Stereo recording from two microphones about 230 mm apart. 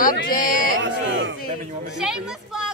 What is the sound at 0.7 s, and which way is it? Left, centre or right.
Speech, right.